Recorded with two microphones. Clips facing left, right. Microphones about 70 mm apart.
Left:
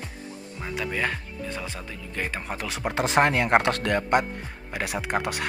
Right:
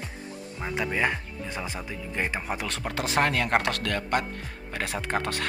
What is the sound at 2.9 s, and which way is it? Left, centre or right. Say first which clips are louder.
Speech: left 4 dB; left.